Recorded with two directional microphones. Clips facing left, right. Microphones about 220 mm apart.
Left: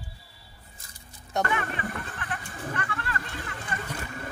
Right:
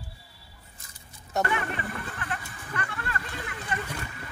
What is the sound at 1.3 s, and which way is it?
Speech, 5° right (ahead or behind).